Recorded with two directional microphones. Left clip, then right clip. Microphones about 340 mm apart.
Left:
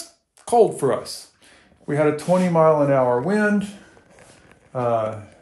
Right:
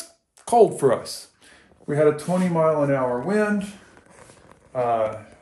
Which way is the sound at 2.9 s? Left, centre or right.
Left.